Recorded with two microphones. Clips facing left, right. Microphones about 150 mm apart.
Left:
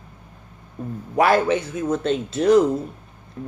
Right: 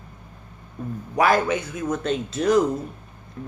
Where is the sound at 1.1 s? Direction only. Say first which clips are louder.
Left 2 dB; 30° left (ahead or behind).